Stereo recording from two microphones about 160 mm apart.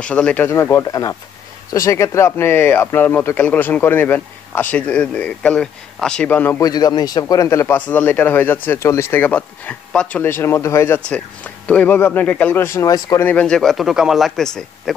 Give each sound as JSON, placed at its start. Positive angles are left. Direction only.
{"t": 0.0, "sound": "speech", "side_deg": 5}
{"t": 6.6, "sound": "speech", "side_deg": 25}
{"t": 13.2, "sound": "speech", "side_deg": 10}